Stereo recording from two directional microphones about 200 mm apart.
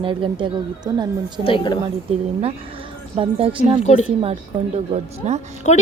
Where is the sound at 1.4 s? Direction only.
25° left (ahead or behind).